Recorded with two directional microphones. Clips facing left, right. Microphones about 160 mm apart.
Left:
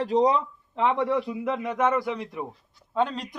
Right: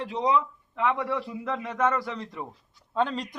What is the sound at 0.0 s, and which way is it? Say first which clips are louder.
A man's voice: left 4 dB; 35° left (ahead or behind).